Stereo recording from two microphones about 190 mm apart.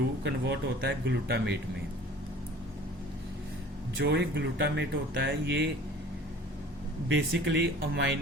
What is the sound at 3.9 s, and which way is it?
Speech, 60° right (ahead or behind).